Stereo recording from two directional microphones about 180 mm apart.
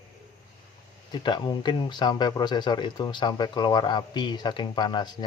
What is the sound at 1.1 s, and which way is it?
Speech, 25° left (ahead or behind).